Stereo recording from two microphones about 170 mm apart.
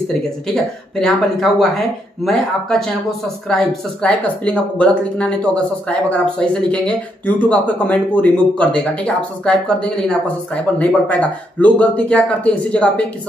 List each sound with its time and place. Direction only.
0.9 s a woman's voice: 5° left (ahead or behind)